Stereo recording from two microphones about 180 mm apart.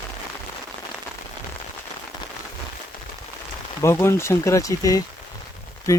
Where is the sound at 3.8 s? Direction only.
15° left (ahead or behind).